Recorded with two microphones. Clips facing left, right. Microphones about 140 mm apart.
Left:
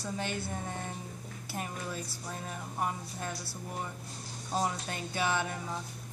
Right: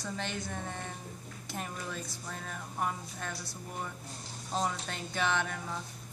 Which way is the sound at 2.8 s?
10° left (ahead or behind).